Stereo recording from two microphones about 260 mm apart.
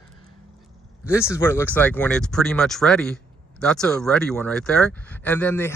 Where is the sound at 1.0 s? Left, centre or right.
Centre.